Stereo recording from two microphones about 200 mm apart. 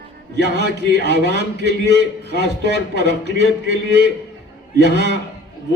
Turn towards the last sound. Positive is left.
turn(degrees=-55)  # may be behind; listen again after turning